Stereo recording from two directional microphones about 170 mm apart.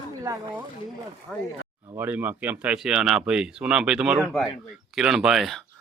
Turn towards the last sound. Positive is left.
turn(degrees=0)  # may be behind; listen again after turning